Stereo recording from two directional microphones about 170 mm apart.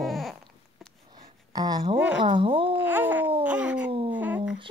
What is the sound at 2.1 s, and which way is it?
Speech, 30° right (ahead or behind).